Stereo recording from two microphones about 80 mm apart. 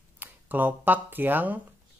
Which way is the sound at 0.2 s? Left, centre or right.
Right.